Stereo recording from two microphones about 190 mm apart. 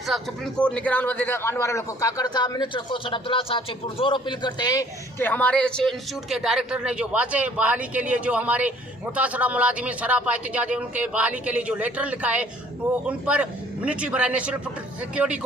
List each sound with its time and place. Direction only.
0.1 s a man's voice: 5° left (ahead or behind)